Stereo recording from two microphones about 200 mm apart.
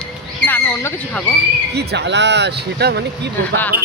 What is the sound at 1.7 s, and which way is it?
Speech, 55° right (ahead or behind).